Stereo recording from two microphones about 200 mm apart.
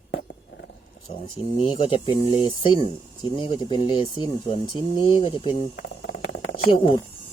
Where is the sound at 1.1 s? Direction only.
25° left (ahead or behind).